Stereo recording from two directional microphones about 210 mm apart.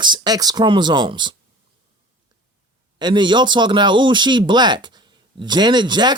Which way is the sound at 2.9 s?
20° right (ahead or behind).